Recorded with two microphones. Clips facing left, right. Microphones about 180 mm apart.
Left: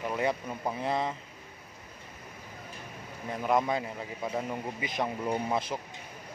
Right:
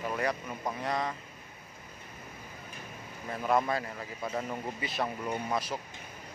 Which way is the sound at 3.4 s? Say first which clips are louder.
Left 1 dB; 15° left (ahead or behind).